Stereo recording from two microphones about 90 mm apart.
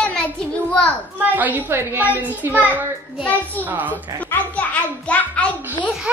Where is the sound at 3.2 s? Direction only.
15° left (ahead or behind).